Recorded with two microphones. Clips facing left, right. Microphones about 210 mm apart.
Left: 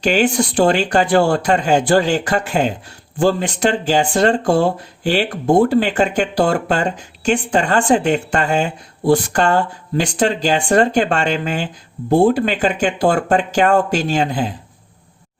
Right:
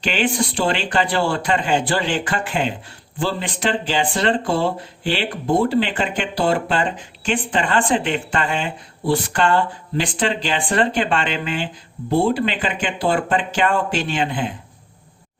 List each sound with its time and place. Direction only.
0.0 s speech: 45° left (ahead or behind)